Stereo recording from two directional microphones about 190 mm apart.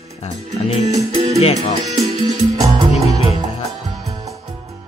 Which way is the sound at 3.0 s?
20° right (ahead or behind).